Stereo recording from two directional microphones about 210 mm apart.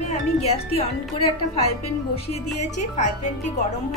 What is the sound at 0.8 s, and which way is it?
A woman's voice, 30° left (ahead or behind).